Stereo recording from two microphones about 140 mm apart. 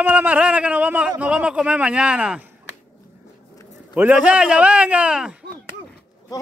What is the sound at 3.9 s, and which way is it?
A man's voice, 10° right (ahead or behind).